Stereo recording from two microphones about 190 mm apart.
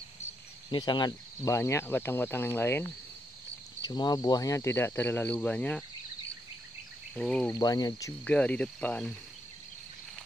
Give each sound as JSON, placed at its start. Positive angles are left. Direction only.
{"t": 0.7, "sound": "speech", "side_deg": 25}
{"t": 3.8, "sound": "speech", "side_deg": 20}
{"t": 7.2, "sound": "speech", "side_deg": 5}
{"t": 7.5, "sound": "speech", "side_deg": 20}
{"t": 8.3, "sound": "speech", "side_deg": 5}